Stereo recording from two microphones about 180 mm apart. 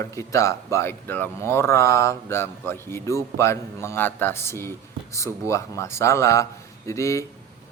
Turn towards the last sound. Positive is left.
turn(degrees=15)  # may be behind; listen again after turning